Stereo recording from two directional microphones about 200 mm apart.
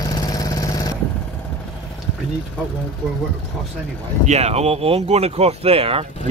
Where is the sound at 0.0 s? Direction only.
15° left (ahead or behind).